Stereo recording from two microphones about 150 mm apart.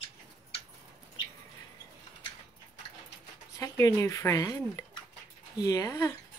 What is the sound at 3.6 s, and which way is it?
Speech, 20° left (ahead or behind).